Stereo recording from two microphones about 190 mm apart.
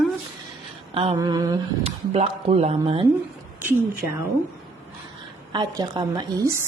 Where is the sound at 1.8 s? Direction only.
30° right (ahead or behind).